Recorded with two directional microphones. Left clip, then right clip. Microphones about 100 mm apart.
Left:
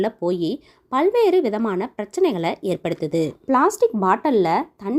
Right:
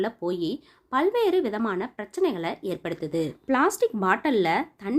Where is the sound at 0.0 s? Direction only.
50° left (ahead or behind).